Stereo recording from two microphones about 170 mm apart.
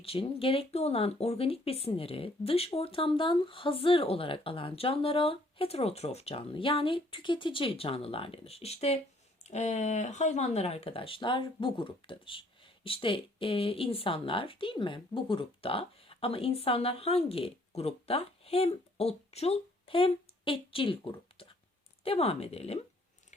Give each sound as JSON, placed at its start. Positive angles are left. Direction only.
{"t": 0.0, "sound": "speech", "side_deg": 35}